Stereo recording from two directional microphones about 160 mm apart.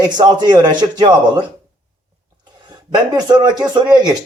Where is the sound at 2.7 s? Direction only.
30° right (ahead or behind).